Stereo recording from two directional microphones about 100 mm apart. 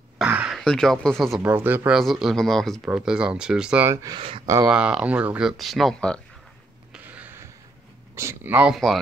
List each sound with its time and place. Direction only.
0.2 s throat clearing: 10° right (ahead or behind)
0.6 s speech: 5° left (ahead or behind)
1.4 s speech: 20° right (ahead or behind)
1.9 s speech: centre (ahead or behind)
2.8 s speech: 10° right (ahead or behind)
3.8 s speech: 30° right (ahead or behind)
4.6 s speech: 10° right (ahead or behind)
5.5 s speech: centre (ahead or behind)
7.1 s a sound: 20° right (ahead or behind)
8.2 s speech: 25° right (ahead or behind)
8.7 s speech: centre (ahead or behind)